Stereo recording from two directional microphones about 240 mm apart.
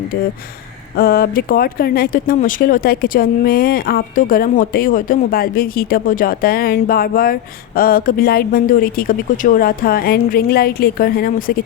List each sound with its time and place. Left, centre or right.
0.9 s speech: left